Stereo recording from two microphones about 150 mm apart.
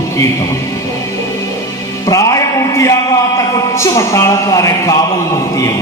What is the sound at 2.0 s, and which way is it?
Music, 20° left (ahead or behind).